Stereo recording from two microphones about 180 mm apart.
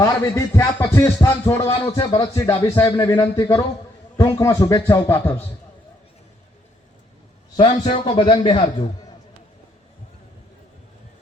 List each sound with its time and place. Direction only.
0.0 s a man's voice: 15° left (ahead or behind)
7.5 s a man's voice: 30° left (ahead or behind)